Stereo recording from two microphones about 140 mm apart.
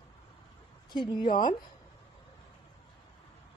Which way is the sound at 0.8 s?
35° left (ahead or behind).